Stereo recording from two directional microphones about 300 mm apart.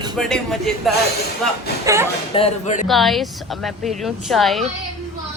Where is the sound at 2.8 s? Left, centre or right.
Centre.